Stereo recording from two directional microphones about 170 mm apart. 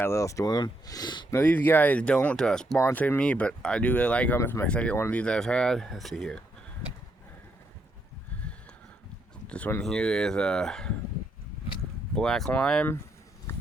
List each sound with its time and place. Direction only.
0.0 s speech: 15° left (ahead or behind)
1.4 s speech: 10° left (ahead or behind)
9.5 s speech: 10° left (ahead or behind)
12.1 s speech: 5° left (ahead or behind)
13.5 s a sound: 10° left (ahead or behind)